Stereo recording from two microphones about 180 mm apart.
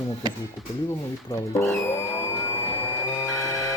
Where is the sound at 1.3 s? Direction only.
15° left (ahead or behind).